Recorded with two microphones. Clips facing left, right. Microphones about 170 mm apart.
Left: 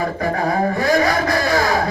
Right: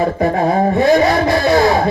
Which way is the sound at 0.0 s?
25° right (ahead or behind).